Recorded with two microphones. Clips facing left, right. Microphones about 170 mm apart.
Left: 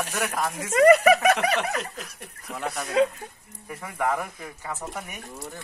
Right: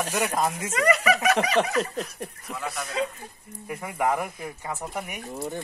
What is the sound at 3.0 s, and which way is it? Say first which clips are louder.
Speech: left 8 dB; 60° left (ahead or behind).